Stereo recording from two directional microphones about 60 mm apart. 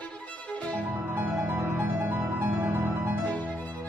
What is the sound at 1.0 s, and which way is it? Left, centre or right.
Music, right.